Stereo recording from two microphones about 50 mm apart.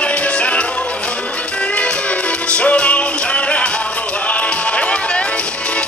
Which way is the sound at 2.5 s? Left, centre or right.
Left.